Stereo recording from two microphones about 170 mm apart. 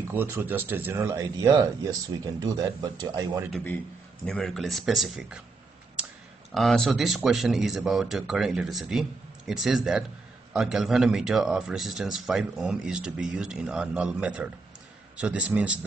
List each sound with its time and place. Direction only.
0.1 s speech: 10° right (ahead or behind)
4.3 s speech: centre (ahead or behind)
6.5 s speech: centre (ahead or behind)